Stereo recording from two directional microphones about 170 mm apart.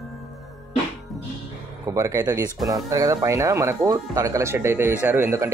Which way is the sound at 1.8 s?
20° right (ahead or behind).